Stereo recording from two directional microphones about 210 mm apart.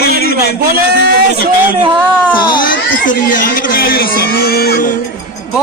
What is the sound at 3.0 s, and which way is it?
A man's voice, 40° left (ahead or behind).